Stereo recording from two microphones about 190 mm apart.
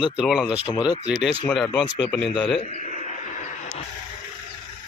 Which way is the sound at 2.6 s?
35° left (ahead or behind).